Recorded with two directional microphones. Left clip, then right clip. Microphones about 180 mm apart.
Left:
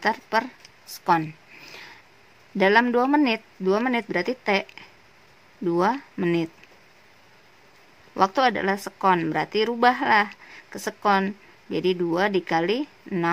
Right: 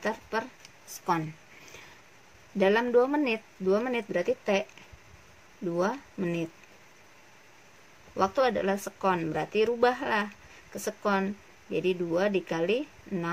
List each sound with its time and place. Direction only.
0.0 s speech: 55° left (ahead or behind)
2.5 s speech: 50° left (ahead or behind)
5.8 s speech: 55° left (ahead or behind)
8.2 s speech: 50° left (ahead or behind)